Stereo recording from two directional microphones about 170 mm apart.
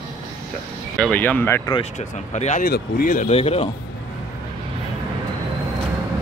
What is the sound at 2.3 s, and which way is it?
Speech, 40° left (ahead or behind).